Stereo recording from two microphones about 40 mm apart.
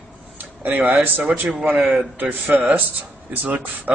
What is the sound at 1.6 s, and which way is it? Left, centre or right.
Speech, right.